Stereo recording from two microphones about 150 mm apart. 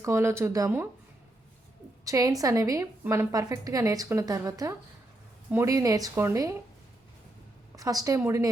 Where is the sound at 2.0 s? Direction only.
25° right (ahead or behind).